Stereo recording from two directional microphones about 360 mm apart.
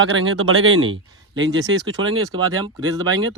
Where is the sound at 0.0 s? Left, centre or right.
Right.